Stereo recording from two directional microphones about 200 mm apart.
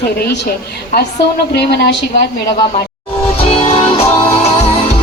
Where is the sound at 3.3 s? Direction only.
30° left (ahead or behind).